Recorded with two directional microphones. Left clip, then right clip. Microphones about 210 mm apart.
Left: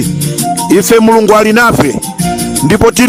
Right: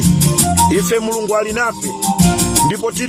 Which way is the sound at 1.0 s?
45° left (ahead or behind).